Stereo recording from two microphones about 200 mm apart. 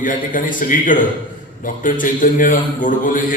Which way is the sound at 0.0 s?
40° left (ahead or behind).